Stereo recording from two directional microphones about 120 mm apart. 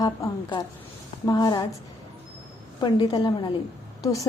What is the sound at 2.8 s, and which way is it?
Speech, 40° left (ahead or behind).